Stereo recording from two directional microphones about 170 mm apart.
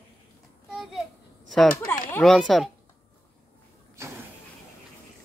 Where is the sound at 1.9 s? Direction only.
15° left (ahead or behind).